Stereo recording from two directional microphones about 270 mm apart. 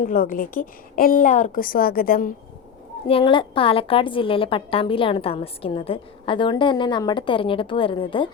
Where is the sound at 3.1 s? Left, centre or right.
Centre.